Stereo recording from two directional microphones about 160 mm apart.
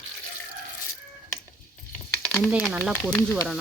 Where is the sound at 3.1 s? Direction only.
15° left (ahead or behind).